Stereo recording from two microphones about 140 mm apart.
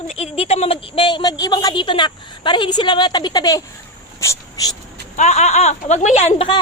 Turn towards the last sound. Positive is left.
turn(degrees=50)  # may be behind; listen again after turning